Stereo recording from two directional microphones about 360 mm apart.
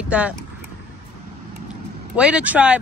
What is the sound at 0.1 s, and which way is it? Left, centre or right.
Speech, centre.